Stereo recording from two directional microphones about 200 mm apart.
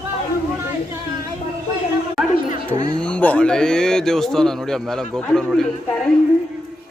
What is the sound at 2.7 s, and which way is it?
Speech, 20° right (ahead or behind).